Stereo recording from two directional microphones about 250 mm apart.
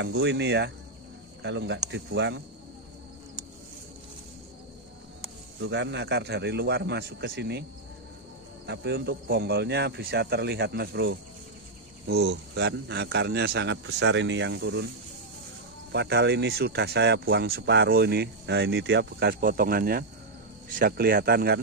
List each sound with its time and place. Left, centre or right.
0.0 s a man's voice: right
5.6 s a man's voice: right
8.6 s a man's voice: right
15.9 s speech: right